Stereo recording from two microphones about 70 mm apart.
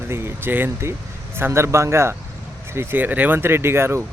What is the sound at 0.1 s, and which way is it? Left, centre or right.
Speech, right.